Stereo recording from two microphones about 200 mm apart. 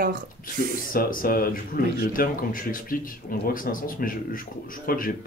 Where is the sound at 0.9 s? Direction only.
45° left (ahead or behind).